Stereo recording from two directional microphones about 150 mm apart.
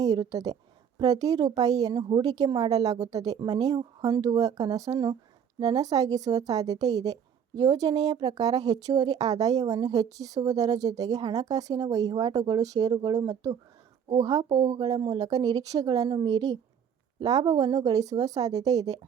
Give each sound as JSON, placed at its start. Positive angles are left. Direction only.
{"t": 0.0, "sound": "a woman's voice", "side_deg": -25}